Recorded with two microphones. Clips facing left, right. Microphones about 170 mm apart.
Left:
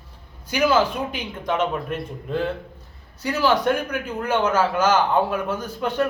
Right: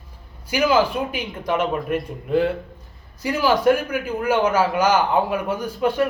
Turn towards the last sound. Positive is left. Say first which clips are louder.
# right 3 dB
turn(degrees=-10)  # may be behind; listen again after turning